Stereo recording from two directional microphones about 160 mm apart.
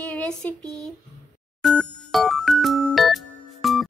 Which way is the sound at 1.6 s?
Centre (ahead or behind).